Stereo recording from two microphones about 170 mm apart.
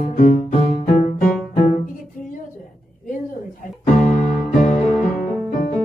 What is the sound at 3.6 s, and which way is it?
Music, 50° left (ahead or behind).